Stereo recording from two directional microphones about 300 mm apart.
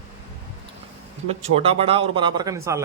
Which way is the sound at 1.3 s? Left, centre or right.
Centre.